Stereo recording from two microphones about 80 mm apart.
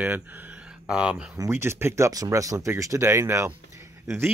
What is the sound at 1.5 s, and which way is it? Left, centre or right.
Speech, right.